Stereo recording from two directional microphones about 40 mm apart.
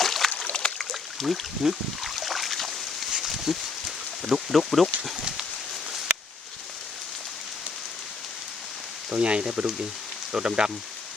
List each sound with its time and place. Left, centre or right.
0.0 s a sound: centre
4.2 s speech: centre
4.5 s speech: centre
9.0 s speech: right